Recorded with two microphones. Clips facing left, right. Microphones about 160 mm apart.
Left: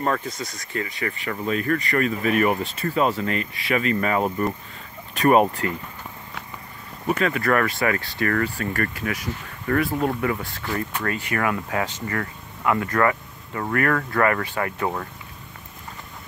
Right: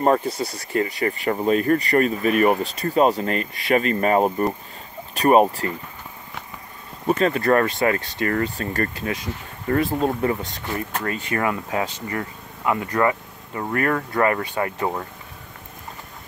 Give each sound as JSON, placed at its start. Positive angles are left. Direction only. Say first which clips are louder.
{"t": 0.0, "sound": "speech", "louder": "right 6 dB", "side_deg": -30}
{"t": 7.1, "sound": "speech", "louder": "right 3 dB", "side_deg": -30}